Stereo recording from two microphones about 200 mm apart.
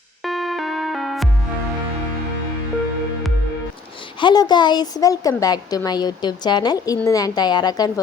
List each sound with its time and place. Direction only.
0.2 s music: centre (ahead or behind)
4.2 s speech: 20° left (ahead or behind)